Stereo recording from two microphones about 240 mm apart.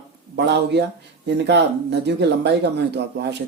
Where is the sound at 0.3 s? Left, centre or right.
Right.